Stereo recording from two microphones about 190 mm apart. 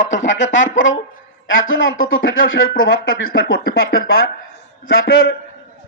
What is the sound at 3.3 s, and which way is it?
A man's voice, 55° left (ahead or behind).